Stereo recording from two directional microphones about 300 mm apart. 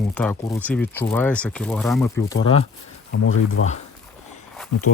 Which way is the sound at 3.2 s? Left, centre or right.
Left.